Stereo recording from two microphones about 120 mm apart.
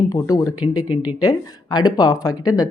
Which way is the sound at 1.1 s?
30° left (ahead or behind).